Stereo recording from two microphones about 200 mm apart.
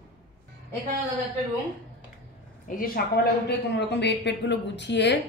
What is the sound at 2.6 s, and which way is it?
A woman's voice, 45° left (ahead or behind).